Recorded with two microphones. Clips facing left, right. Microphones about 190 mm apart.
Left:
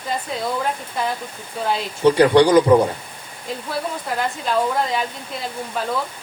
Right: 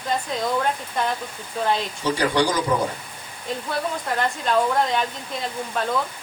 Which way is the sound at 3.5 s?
5° left (ahead or behind).